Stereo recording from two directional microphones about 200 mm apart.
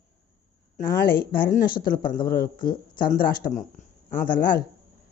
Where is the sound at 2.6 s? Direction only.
45° left (ahead or behind).